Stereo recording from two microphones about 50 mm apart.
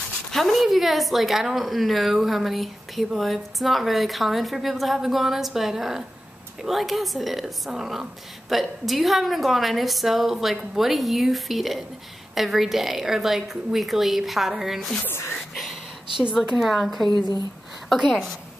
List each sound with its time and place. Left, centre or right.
0.3 s a woman's voice: centre
15.0 s speech: left
15.5 s a sound: centre
16.3 s a woman's voice: centre